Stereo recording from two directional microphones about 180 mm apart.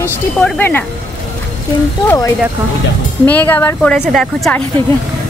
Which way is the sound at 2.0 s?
15° left (ahead or behind).